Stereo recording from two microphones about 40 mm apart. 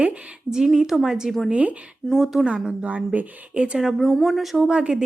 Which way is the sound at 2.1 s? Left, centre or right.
Centre.